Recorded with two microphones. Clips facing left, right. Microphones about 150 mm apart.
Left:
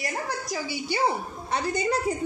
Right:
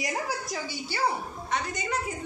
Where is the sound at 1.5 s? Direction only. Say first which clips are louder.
Left 5 dB; 35° left (ahead or behind).